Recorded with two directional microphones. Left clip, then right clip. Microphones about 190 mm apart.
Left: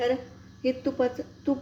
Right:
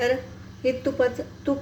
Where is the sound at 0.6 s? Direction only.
15° left (ahead or behind).